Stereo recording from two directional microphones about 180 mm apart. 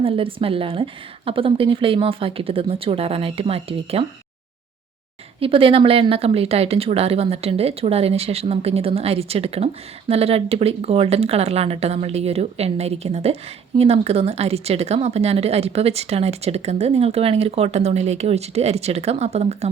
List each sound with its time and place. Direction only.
0.0 s speech: 30° right (ahead or behind)
5.4 s speech: 30° right (ahead or behind)